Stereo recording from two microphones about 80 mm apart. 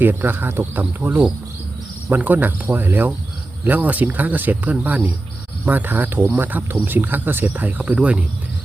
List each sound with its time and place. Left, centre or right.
0.0 s speech: right